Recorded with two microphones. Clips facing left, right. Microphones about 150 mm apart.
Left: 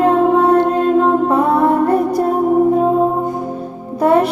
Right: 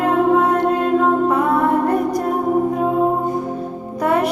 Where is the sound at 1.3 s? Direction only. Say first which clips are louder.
Left 3 dB; 30° left (ahead or behind).